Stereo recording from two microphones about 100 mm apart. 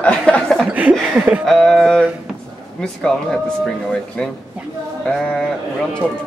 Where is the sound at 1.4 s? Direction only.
5° left (ahead or behind).